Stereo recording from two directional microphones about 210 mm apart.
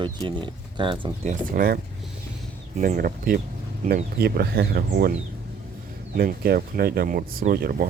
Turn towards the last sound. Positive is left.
turn(degrees=-45)  # may be behind; listen again after turning